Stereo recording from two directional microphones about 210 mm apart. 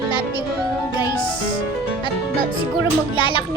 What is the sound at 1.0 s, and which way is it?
Music, 20° left (ahead or behind).